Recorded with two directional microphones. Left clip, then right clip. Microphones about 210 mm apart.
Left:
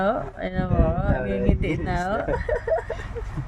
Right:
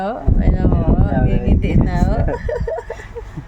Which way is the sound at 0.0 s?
Centre (ahead or behind).